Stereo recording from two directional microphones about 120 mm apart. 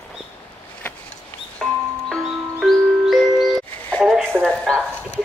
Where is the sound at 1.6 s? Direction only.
5° left (ahead or behind).